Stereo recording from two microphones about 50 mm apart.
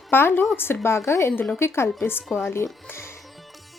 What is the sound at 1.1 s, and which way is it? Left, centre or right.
A woman's voice, left.